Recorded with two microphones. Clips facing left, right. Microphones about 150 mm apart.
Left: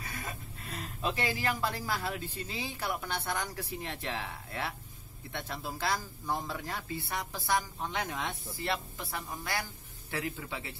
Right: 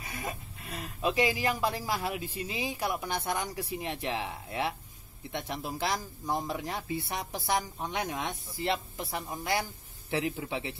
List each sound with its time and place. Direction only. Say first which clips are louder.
0.0 s speech: right 3 dB; 20° right (ahead or behind)